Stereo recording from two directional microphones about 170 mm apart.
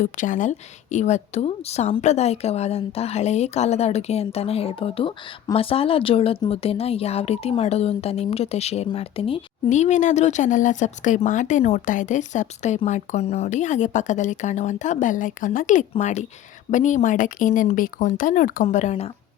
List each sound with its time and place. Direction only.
0.0 s a woman's voice: 50° left (ahead or behind)